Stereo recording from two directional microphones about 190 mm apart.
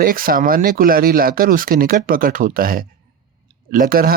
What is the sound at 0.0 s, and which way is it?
Speech, 50° right (ahead or behind).